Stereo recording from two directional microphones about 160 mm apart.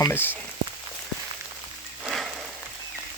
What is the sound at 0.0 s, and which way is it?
Speech, 15° left (ahead or behind).